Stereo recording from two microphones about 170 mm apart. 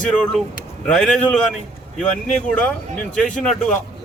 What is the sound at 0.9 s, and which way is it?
A man's voice, 5° left (ahead or behind).